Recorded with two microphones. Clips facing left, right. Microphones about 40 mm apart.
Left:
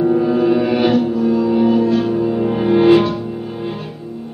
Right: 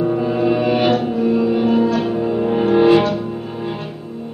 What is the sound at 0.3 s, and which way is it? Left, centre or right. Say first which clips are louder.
Music: left 2 dB; right.